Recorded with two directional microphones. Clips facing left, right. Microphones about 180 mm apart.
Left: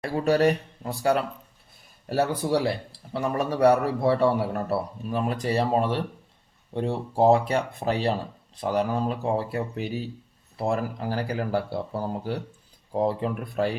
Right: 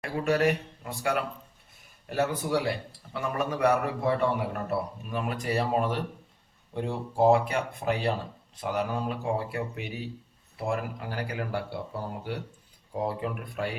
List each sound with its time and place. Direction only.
0.0 s a man's voice: 35° left (ahead or behind)